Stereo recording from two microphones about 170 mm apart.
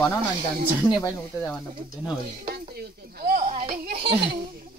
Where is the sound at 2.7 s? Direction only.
65° right (ahead or behind).